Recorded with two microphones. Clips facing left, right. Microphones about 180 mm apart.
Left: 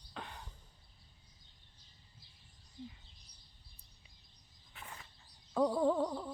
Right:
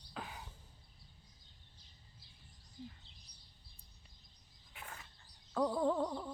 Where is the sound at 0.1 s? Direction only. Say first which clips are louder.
Right 1 dB; 5° right (ahead or behind).